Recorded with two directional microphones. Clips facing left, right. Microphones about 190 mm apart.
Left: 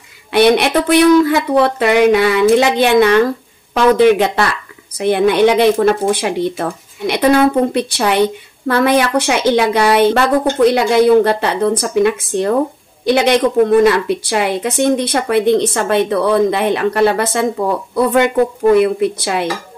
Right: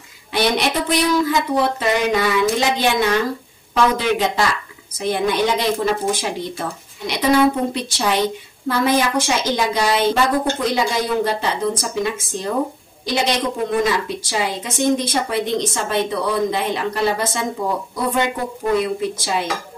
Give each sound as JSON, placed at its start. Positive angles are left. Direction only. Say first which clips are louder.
{"t": 0.3, "sound": "a woman's voice", "louder": "left 8 dB", "side_deg": 60}
{"t": 18.7, "sound": "a woman's voice", "louder": "left 6 dB", "side_deg": 60}